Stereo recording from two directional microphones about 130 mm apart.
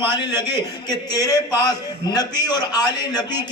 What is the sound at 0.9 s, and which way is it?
A man's voice, 30° left (ahead or behind).